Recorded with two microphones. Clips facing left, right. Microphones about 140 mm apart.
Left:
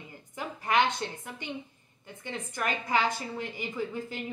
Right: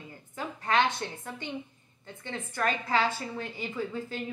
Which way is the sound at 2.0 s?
15° left (ahead or behind).